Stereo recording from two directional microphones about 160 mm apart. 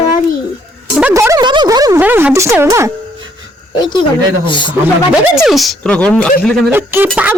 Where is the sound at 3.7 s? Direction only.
30° left (ahead or behind).